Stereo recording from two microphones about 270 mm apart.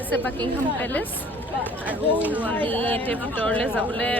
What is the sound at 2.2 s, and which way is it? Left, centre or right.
Speech, centre.